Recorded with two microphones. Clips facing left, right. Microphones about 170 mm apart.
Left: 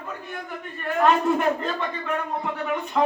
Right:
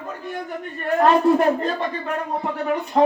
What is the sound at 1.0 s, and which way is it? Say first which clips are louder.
A man's voice: right 4 dB; 35° right (ahead or behind).